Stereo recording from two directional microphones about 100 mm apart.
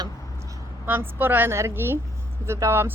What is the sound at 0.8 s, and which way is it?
A woman's voice, 20° right (ahead or behind).